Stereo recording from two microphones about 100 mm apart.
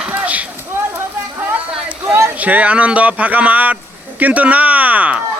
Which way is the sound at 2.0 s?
25° right (ahead or behind).